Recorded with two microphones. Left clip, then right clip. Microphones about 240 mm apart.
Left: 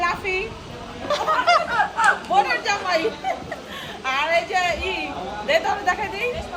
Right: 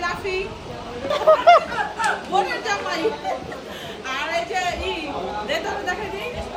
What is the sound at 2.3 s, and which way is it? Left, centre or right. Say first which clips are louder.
Speech: left 2 dB; centre.